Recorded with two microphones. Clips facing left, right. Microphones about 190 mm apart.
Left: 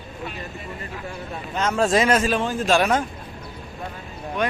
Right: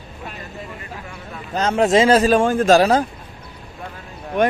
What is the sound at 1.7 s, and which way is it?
A man's voice, 25° right (ahead or behind).